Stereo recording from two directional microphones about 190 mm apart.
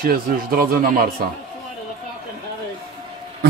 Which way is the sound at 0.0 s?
50° right (ahead or behind).